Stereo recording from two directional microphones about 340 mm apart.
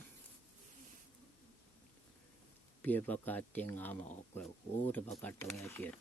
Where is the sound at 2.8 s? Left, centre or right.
Centre.